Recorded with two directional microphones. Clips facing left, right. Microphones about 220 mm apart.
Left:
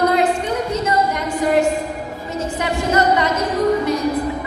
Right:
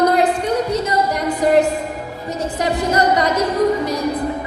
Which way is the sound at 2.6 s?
35° right (ahead or behind).